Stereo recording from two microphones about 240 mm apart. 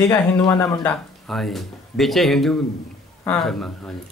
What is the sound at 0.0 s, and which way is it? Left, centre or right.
Speech, centre.